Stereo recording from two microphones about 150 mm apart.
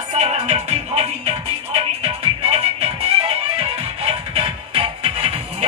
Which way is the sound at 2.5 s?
40° right (ahead or behind).